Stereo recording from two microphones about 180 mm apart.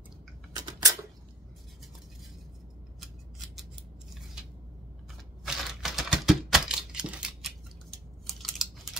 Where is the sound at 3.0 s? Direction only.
Centre (ahead or behind).